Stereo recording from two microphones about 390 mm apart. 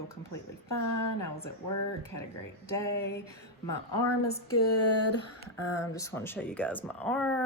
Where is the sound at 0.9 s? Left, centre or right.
Left.